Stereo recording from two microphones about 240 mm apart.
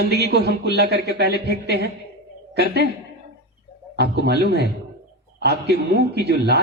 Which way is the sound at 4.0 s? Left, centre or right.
Right.